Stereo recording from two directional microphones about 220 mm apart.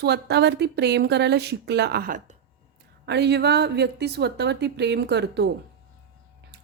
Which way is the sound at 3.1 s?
50° right (ahead or behind).